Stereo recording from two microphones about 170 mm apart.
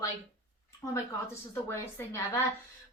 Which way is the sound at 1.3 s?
15° left (ahead or behind).